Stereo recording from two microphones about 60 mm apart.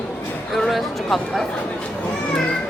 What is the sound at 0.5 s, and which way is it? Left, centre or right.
Speech, centre.